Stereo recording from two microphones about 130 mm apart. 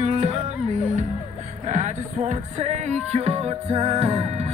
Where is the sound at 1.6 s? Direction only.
65° right (ahead or behind).